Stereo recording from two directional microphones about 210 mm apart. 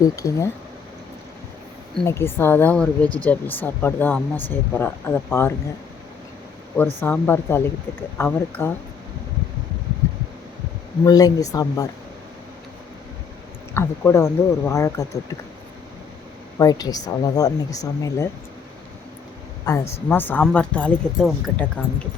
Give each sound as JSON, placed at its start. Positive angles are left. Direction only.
{"t": 0.0, "sound": "speech", "side_deg": 15}
{"t": 2.0, "sound": "speech", "side_deg": 10}
{"t": 6.7, "sound": "speech", "side_deg": 10}
{"t": 11.0, "sound": "speech", "side_deg": 15}
{"t": 13.7, "sound": "speech", "side_deg": 10}
{"t": 16.6, "sound": "speech", "side_deg": 15}
{"t": 19.6, "sound": "speech", "side_deg": 15}